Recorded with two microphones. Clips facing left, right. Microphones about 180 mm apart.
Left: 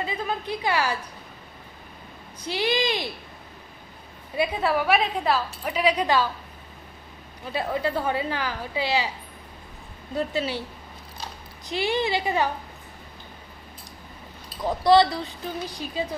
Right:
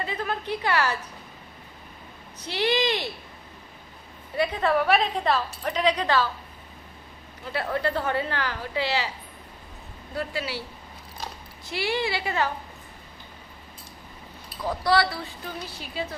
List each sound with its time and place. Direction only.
0.0 s a sound: 15° left (ahead or behind)
2.4 s a woman's voice: 10° left (ahead or behind)
4.4 s a woman's voice: 10° left (ahead or behind)
7.5 s a woman's voice: 10° left (ahead or behind)
10.1 s speech: 20° left (ahead or behind)
11.6 s speech: 20° left (ahead or behind)
14.6 s speech: 20° left (ahead or behind)